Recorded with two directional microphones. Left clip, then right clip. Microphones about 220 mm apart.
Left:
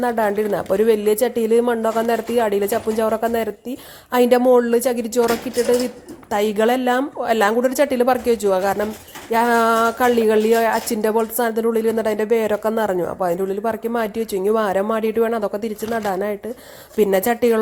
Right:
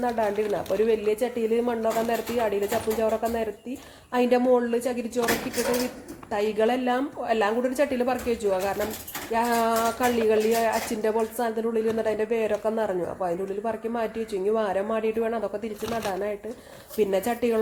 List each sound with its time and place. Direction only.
0.0 s speech: 45° left (ahead or behind)
6.3 s speech: 45° left (ahead or behind)